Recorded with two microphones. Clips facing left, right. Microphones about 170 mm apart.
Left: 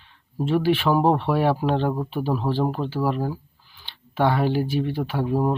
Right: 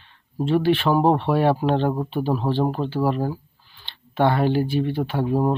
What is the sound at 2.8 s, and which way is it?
Speech, 15° right (ahead or behind).